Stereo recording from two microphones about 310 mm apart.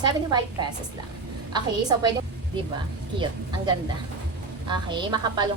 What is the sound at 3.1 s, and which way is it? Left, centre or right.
A woman's voice, centre.